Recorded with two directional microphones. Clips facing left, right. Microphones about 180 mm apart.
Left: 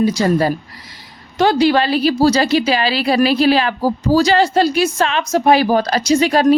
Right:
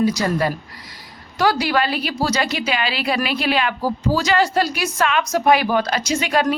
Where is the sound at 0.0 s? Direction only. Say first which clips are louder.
Left 4 dB; 30° left (ahead or behind).